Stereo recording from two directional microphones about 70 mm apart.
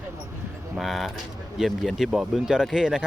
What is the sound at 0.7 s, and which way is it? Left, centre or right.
Speech, centre.